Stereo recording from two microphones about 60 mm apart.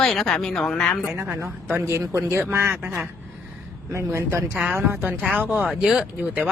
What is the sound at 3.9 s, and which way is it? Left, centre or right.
Speech, right.